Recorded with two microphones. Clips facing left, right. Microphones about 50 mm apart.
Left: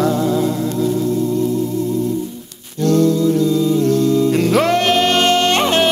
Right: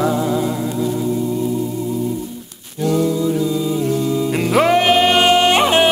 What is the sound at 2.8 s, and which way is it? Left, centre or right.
Music, centre.